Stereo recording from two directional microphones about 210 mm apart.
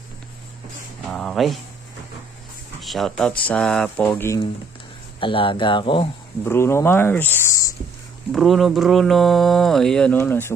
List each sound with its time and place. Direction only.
1.1 s speech: centre (ahead or behind)
2.8 s speech: centre (ahead or behind)
5.2 s speech: 25° left (ahead or behind)
6.4 s speech: 10° left (ahead or behind)
8.3 s speech: centre (ahead or behind)